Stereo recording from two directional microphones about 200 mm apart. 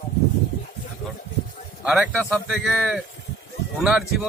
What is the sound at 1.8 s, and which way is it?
A man's voice, 5° right (ahead or behind).